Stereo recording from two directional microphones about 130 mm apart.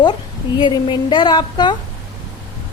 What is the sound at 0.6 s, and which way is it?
A woman's voice, 35° left (ahead or behind).